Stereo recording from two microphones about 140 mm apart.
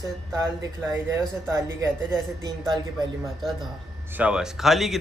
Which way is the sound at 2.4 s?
30° right (ahead or behind).